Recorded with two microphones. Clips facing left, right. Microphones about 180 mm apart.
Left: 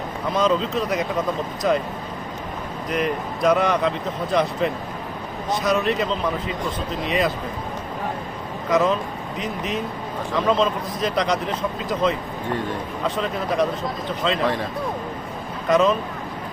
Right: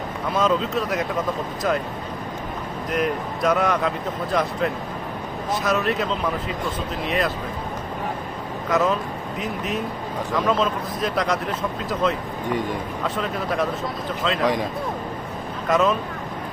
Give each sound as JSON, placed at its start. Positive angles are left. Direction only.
{"t": 0.3, "sound": "speech", "side_deg": -5}
{"t": 2.9, "sound": "speech", "side_deg": 0}
{"t": 8.7, "sound": "speech", "side_deg": -5}
{"t": 13.1, "sound": "speech", "side_deg": 0}
{"t": 15.7, "sound": "speech", "side_deg": -5}